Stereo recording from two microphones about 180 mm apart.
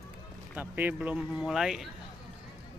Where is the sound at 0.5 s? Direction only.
10° right (ahead or behind).